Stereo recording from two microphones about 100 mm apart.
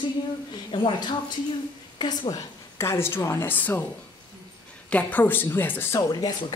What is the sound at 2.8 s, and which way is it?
A woman's voice, 25° left (ahead or behind).